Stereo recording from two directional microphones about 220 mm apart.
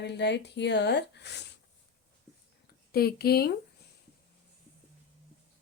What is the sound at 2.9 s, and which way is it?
Speech, 45° left (ahead or behind).